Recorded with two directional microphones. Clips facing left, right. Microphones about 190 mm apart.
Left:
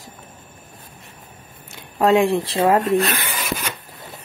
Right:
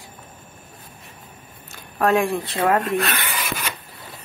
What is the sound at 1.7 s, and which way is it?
Speech, 25° left (ahead or behind).